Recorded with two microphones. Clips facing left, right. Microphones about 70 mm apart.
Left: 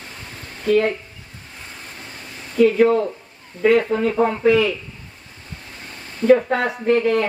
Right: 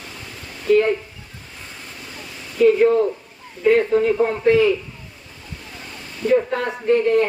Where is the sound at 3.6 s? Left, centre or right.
Left.